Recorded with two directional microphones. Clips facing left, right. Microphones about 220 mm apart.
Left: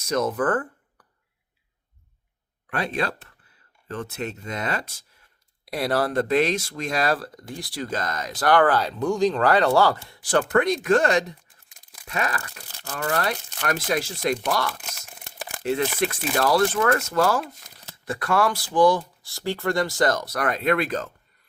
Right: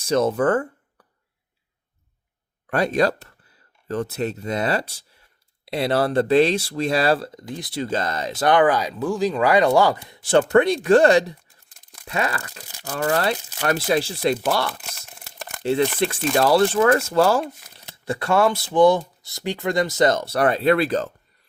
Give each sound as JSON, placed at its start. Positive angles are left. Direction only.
{"t": 0.0, "sound": "speech", "side_deg": -30}
{"t": 2.6, "sound": "speech", "side_deg": -40}
{"t": 14.7, "sound": "crumpling", "side_deg": 0}
{"t": 15.6, "sound": "speech", "side_deg": -30}